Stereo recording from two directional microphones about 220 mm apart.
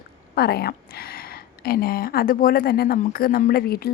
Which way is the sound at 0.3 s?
45° left (ahead or behind).